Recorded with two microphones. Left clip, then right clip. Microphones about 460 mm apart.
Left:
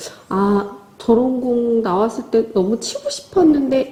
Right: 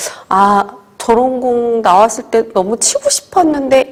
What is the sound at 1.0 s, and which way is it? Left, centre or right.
A woman's voice, right.